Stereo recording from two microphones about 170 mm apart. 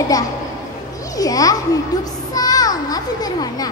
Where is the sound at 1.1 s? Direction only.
20° left (ahead or behind).